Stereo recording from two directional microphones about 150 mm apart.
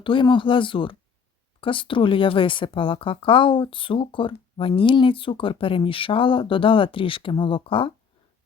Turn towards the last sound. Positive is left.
turn(degrees=35)  # may be behind; listen again after turning